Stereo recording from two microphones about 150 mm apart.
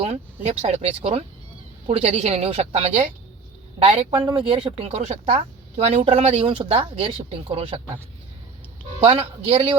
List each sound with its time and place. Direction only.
0.0 s a woman's voice: 45° right (ahead or behind)
9.0 s speech: 40° right (ahead or behind)